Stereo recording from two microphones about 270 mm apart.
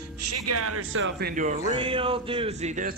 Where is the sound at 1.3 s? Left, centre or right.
Right.